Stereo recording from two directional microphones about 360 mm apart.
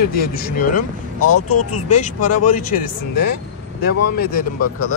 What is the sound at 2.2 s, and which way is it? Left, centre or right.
Speech, left.